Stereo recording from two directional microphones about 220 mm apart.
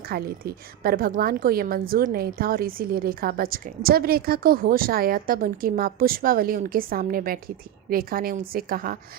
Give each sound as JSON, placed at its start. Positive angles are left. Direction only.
{"t": 0.1, "sound": "a woman's voice", "side_deg": -45}